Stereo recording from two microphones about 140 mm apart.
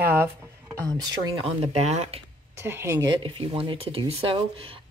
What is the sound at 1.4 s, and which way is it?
Speech, 50° right (ahead or behind).